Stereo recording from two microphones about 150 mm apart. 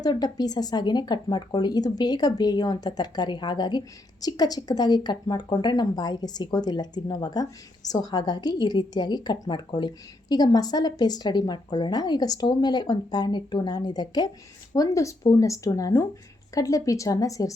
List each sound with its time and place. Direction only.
0.0 s speech: 25° left (ahead or behind)